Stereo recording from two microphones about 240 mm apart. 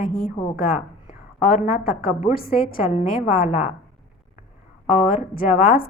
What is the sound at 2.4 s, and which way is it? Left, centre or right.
A woman's voice, left.